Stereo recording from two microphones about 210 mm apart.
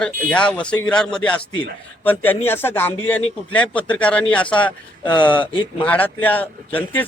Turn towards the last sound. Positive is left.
turn(degrees=10)  # may be behind; listen again after turning